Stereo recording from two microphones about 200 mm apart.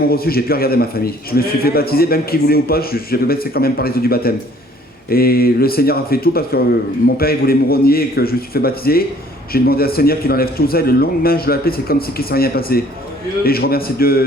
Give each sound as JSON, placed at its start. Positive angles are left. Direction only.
{"t": 0.1, "sound": "a man's voice", "side_deg": 50}